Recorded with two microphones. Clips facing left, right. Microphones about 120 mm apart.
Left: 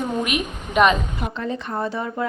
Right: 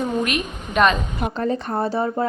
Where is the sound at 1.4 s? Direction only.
40° right (ahead or behind).